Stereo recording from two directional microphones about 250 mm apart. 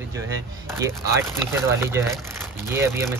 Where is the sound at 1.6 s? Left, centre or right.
Centre.